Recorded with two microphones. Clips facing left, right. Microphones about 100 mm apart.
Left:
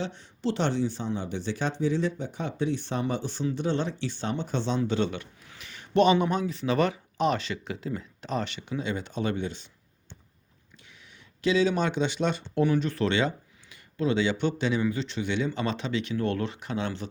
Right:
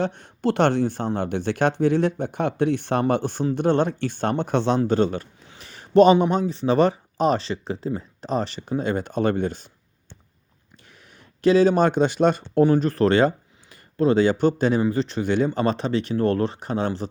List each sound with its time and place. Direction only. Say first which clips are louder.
0.0 s speech: right 7 dB; 55° right (ahead or behind)
4.8 s a sound: right 7 dB; 45° right (ahead or behind)
6.2 s speech: right 6 dB; 30° right (ahead or behind); by 9.6 s 45° right (ahead or behind)
11.4 s speech: right 8 dB; 45° right (ahead or behind)